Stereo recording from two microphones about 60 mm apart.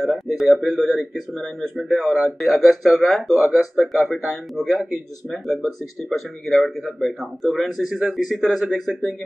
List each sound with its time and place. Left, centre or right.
0.0 s speech: centre
6.0 s speech: centre